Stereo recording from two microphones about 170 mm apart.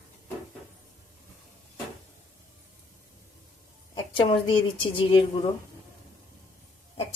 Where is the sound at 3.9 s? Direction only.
30° left (ahead or behind).